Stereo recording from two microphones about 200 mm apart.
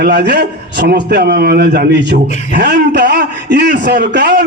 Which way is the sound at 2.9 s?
55° right (ahead or behind).